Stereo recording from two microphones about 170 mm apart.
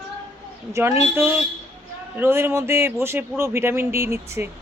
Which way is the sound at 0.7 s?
15° right (ahead or behind).